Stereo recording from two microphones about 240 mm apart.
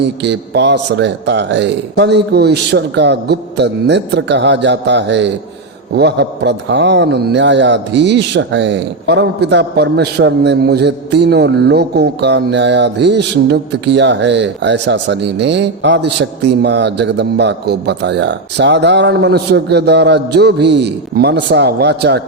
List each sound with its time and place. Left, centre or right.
0.0 s a man's voice: right